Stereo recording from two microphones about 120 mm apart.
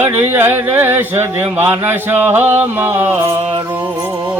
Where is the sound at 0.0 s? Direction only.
20° right (ahead or behind).